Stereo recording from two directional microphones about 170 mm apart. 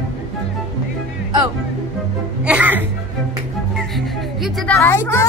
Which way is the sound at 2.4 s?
10° right (ahead or behind).